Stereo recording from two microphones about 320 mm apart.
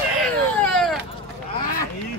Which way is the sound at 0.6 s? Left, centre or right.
Centre.